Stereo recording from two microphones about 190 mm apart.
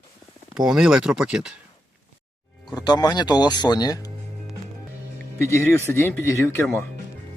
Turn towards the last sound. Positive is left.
turn(degrees=10)  # may be behind; listen again after turning